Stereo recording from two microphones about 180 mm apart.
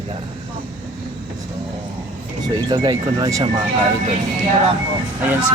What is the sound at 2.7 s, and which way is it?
Speech, 25° right (ahead or behind).